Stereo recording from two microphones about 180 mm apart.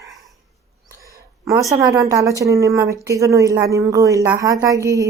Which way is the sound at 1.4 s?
20° right (ahead or behind).